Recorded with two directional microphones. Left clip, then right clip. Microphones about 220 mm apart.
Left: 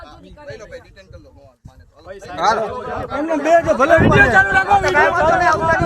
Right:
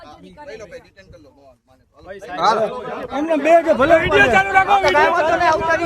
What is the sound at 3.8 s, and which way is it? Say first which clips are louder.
Speech: left 1 dB; 15° right (ahead or behind).